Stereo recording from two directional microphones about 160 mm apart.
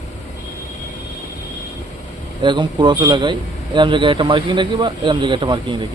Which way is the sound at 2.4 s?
30° right (ahead or behind).